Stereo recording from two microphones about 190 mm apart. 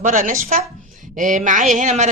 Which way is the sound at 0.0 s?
45° right (ahead or behind).